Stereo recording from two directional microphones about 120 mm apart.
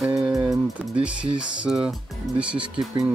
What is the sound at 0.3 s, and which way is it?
Music, 30° right (ahead or behind).